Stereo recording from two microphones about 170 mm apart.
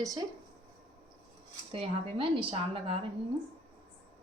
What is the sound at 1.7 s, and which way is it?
Speech, 30° right (ahead or behind).